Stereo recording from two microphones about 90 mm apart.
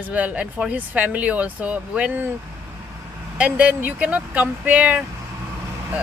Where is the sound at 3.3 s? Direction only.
15° right (ahead or behind).